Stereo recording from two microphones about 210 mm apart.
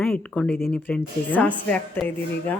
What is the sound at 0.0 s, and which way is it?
A woman's voice, 5° left (ahead or behind).